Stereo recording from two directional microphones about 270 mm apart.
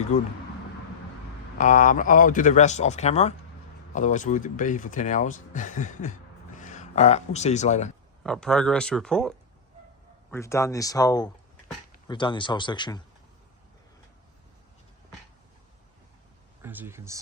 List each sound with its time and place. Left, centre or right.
1.5 s speech: left
8.2 s speech: centre
10.3 s speech: centre
16.6 s speech: centre